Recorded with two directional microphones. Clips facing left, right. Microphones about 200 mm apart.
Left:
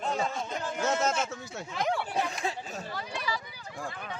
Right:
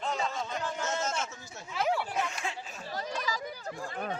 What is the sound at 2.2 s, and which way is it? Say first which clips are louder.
Chatter: left 3 dB; 35° left (ahead or behind).